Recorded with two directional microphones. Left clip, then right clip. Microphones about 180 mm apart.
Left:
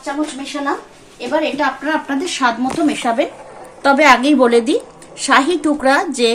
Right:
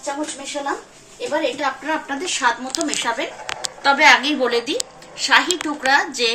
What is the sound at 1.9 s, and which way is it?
Speech, 65° left (ahead or behind).